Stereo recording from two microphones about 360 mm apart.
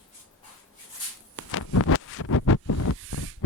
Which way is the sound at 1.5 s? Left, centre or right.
Left.